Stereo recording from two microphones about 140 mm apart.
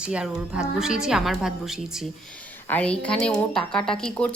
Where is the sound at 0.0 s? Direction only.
5° right (ahead or behind).